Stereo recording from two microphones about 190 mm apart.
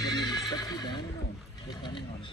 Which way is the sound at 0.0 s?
20° left (ahead or behind).